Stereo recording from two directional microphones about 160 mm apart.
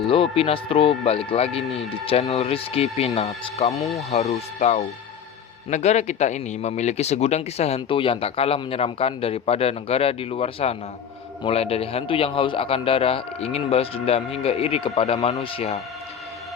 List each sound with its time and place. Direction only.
0.1 s a man's voice: 35° left (ahead or behind)
3.8 s speech: centre (ahead or behind)
4.4 s a man's voice: 40° left (ahead or behind)